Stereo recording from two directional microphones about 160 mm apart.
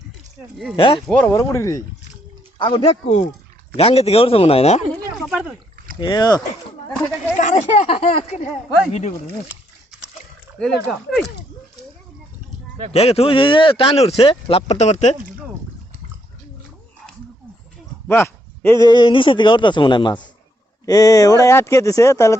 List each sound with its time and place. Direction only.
0.8 s speech: 30° left (ahead or behind)
1.0 s speech: 10° left (ahead or behind)
1.4 s speech: 20° left (ahead or behind)
2.6 s speech: 35° left (ahead or behind)
5.1 s speech: centre (ahead or behind)
6.0 s speech: 25° left (ahead or behind)
7.3 s speech: 50° left (ahead or behind)
10.6 s speech: 5° left (ahead or behind)
12.9 s speech: 40° left (ahead or behind)
18.1 s speech: 15° left (ahead or behind)